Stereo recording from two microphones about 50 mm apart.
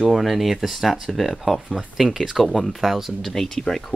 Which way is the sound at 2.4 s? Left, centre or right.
Centre.